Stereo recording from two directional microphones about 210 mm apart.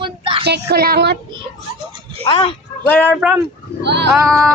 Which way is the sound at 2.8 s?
5° left (ahead or behind).